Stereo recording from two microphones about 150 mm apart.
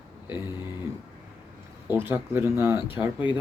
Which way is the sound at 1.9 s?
15° right (ahead or behind).